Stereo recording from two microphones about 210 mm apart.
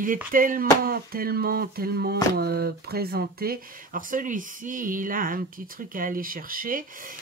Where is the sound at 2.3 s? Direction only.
50° right (ahead or behind).